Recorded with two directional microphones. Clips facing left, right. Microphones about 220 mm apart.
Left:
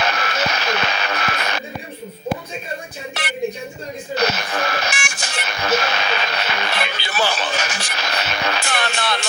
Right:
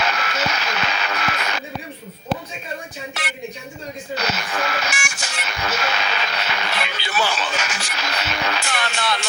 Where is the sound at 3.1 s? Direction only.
35° left (ahead or behind).